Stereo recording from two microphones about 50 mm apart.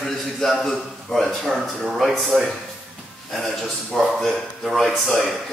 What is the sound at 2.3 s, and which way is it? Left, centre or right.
Speech, left.